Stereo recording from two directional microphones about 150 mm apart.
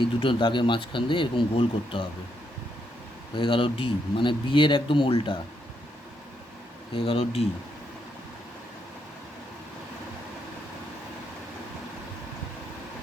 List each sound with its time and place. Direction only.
0.0 s speech: 35° left (ahead or behind)
3.3 s speech: 35° left (ahead or behind)
6.9 s speech: 40° left (ahead or behind)